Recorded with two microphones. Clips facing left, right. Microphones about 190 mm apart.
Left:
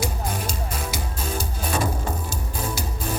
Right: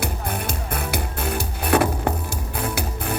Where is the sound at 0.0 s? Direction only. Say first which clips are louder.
Right 1 dB; 60° right (ahead or behind).